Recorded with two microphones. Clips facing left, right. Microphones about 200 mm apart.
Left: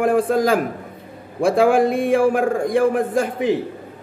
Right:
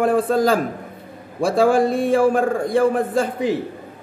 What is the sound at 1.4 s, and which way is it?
Speech, 55° left (ahead or behind).